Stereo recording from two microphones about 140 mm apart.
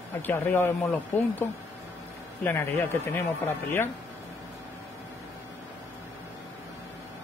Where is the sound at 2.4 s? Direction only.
15° left (ahead or behind).